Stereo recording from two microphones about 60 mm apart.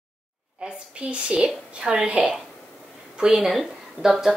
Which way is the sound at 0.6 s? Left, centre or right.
Centre.